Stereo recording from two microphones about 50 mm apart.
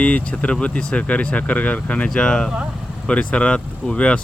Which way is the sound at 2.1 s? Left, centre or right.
Centre.